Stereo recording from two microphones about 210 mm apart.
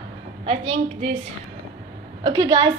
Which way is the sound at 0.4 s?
25° right (ahead or behind).